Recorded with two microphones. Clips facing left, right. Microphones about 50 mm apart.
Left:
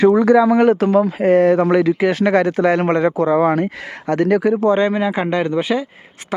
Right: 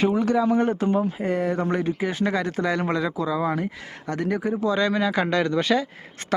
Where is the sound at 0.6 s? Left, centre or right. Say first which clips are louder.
Left 9 dB; left.